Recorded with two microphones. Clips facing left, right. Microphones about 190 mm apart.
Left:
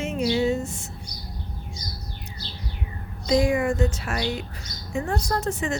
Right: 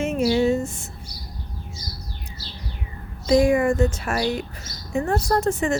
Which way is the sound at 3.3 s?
50° right (ahead or behind).